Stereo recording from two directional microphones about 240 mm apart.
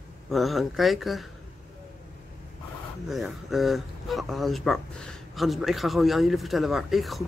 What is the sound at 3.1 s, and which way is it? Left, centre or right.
Speech, centre.